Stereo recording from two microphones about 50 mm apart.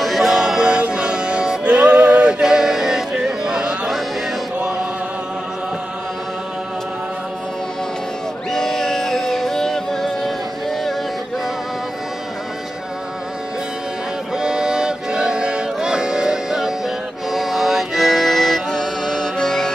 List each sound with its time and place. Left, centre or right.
0.0 s music: centre
8.5 s music: centre
14.3 s music: centre